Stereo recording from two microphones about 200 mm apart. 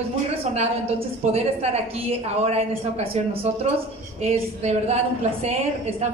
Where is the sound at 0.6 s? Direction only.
30° right (ahead or behind).